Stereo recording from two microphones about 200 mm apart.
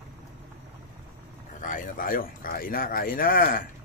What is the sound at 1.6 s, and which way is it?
Speech, 40° left (ahead or behind).